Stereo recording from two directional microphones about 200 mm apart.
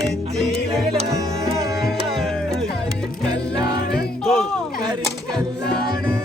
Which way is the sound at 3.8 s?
55° left (ahead or behind).